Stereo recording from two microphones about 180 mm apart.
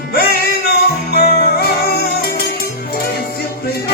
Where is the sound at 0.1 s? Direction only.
55° left (ahead or behind).